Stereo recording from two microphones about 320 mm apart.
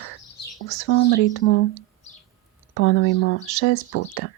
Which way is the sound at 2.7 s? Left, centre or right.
Left.